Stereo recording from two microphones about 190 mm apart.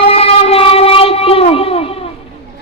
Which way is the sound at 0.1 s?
30° left (ahead or behind).